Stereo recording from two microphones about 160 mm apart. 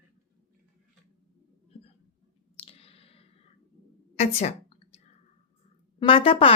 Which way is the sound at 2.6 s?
40° left (ahead or behind).